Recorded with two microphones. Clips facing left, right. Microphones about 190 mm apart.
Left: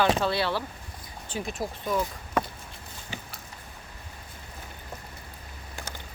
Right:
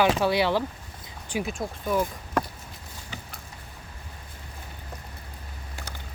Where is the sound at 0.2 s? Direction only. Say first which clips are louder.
Right 4 dB; 15° right (ahead or behind).